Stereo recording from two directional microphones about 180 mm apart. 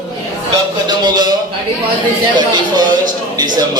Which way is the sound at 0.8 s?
25° right (ahead or behind).